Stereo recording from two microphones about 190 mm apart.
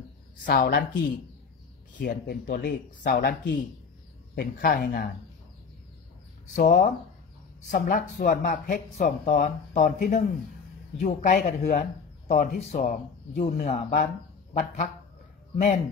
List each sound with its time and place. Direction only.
0.5 s a woman's voice: 65° left (ahead or behind); by 3.2 s 50° left (ahead or behind)
3.2 s a woman's voice: 60° left (ahead or behind)
6.4 s speech: 45° left (ahead or behind)
15.5 s speech: 40° left (ahead or behind)